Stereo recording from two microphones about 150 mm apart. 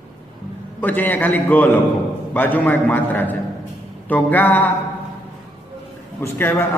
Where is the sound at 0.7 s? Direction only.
10° left (ahead or behind).